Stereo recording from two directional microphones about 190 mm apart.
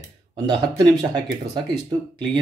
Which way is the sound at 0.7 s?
20° right (ahead or behind).